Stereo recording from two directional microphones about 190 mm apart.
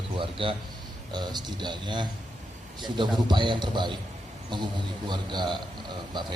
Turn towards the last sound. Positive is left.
turn(degrees=-25)  # may be behind; listen again after turning